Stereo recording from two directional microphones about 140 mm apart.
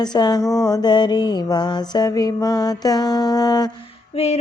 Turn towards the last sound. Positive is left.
turn(degrees=50)  # may be behind; listen again after turning